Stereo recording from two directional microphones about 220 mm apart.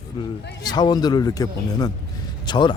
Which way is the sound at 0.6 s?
20° left (ahead or behind).